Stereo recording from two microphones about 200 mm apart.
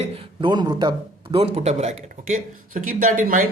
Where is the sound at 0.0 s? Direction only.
30° right (ahead or behind).